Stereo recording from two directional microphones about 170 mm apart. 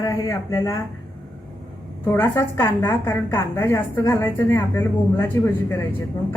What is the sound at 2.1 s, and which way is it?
A woman's voice, 15° left (ahead or behind).